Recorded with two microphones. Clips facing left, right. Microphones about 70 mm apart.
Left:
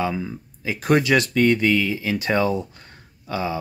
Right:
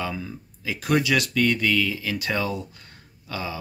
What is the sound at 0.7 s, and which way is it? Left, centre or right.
Speech, left.